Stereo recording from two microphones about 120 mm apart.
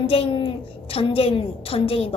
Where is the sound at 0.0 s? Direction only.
50° left (ahead or behind).